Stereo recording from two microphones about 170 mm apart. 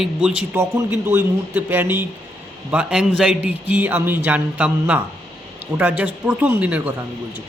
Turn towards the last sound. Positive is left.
turn(degrees=-10)  # may be behind; listen again after turning